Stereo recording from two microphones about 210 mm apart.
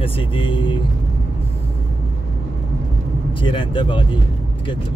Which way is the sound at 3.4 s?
25° left (ahead or behind).